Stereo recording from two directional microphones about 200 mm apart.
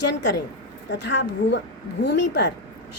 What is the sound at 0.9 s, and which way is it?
A woman's voice, 60° left (ahead or behind).